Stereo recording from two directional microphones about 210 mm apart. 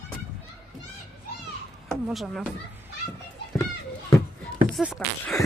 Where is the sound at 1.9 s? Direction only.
Centre (ahead or behind).